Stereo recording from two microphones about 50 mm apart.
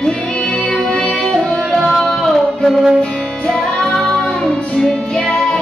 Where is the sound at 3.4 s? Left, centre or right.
Centre.